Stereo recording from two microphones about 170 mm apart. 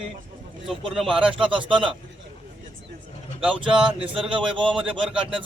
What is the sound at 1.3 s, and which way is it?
Speech, 30° right (ahead or behind).